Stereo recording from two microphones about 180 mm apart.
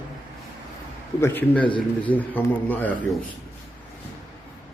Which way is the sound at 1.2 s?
10° left (ahead or behind).